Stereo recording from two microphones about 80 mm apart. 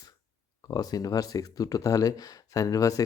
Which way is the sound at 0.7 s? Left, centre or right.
Left.